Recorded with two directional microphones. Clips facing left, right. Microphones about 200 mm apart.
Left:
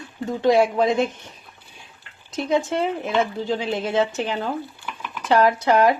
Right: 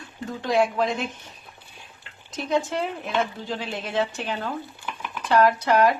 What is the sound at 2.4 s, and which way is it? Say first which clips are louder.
Speech: left 3 dB; 20° left (ahead or behind).